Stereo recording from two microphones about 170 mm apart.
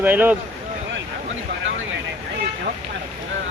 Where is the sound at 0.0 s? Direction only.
10° right (ahead or behind).